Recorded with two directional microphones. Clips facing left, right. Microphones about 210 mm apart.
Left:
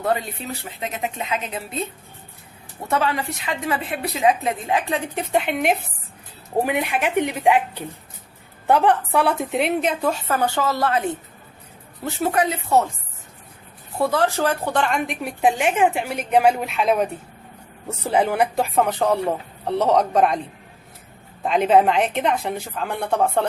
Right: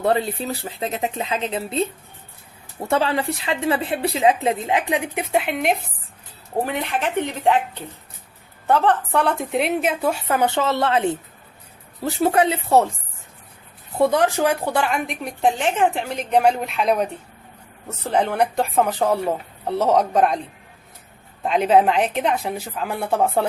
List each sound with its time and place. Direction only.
0.0 s a woman's voice: 30° right (ahead or behind)
14.0 s a woman's voice: 20° right (ahead or behind); by 20.4 s centre (ahead or behind)
21.4 s a woman's voice: centre (ahead or behind)